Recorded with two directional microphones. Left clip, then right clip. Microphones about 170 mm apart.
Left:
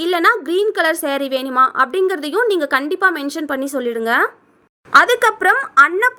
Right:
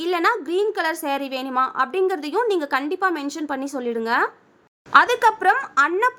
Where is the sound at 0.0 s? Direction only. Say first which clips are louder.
Left 6 dB; 20° left (ahead or behind).